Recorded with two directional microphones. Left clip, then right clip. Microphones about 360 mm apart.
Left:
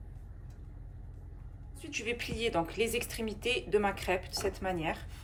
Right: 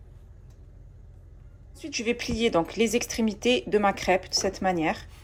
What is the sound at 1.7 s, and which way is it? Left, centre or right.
A woman's voice, centre.